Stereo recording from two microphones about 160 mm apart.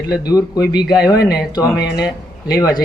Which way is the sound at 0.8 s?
5° right (ahead or behind).